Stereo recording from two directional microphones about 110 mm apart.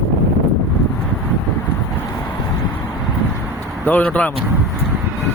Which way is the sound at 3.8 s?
15° left (ahead or behind).